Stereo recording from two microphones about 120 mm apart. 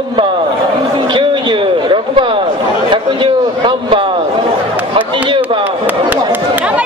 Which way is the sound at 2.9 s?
45° right (ahead or behind).